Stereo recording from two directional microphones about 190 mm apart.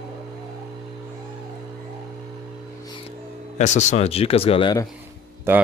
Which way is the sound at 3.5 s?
35° left (ahead or behind).